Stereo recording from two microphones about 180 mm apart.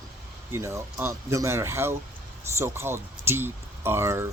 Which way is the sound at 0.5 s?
15° right (ahead or behind).